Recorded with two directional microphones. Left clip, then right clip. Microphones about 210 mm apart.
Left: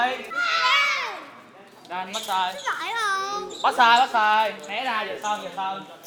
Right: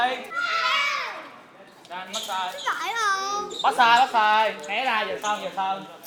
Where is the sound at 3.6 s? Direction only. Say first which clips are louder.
Left 1 dB; 15° left (ahead or behind); by 4.5 s centre (ahead or behind).